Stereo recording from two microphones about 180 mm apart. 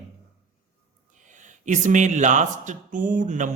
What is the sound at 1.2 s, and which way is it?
A man's voice, 45° right (ahead or behind).